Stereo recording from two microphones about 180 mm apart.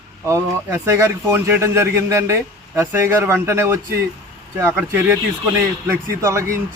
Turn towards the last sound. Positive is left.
turn(degrees=-15)  # may be behind; listen again after turning